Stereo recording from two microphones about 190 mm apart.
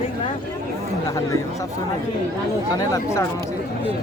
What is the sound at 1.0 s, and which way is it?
Speech, 15° left (ahead or behind).